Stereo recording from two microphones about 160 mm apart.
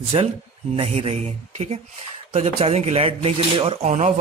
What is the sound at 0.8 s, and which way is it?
Speech, 40° right (ahead or behind).